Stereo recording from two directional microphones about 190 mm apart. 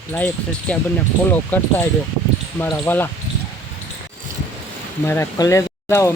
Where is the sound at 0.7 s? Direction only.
5° left (ahead or behind).